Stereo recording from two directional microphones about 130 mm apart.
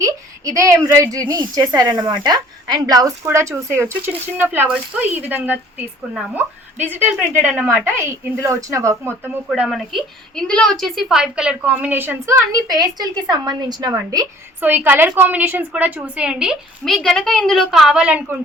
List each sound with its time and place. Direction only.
0.0 s a sound: 25° right (ahead or behind)
0.9 s a woman's voice: 25° right (ahead or behind)
9.6 s a woman's voice: centre (ahead or behind); by 14.3 s 30° right (ahead or behind)
14.6 s a woman's voice: 15° right (ahead or behind)